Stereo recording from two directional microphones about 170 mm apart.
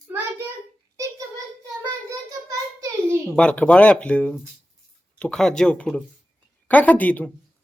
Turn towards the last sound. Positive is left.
turn(degrees=10)  # may be behind; listen again after turning